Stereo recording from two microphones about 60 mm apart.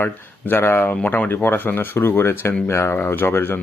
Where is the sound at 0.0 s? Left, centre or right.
Left.